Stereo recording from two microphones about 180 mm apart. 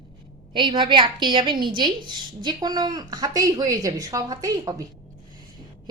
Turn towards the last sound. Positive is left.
turn(degrees=-20)  # may be behind; listen again after turning